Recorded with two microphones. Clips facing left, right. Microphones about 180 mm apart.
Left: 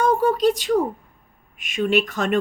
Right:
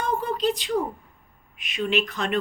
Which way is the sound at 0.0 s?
45° left (ahead or behind).